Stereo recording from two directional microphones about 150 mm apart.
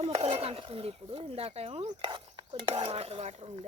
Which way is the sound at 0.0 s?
40° right (ahead or behind).